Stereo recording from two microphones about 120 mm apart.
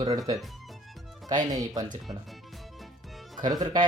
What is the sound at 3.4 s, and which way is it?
Speech, 35° right (ahead or behind).